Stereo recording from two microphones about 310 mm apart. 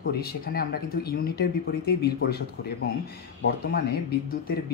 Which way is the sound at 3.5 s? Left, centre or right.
Left.